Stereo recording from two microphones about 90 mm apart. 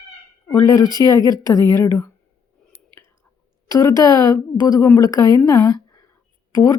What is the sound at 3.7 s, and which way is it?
Speech, 40° left (ahead or behind).